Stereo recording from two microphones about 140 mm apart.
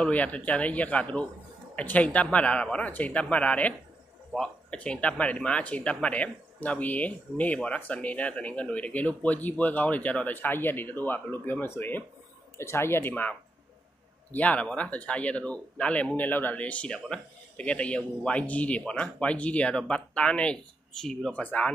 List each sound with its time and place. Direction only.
0.0 s speech: 10° left (ahead or behind)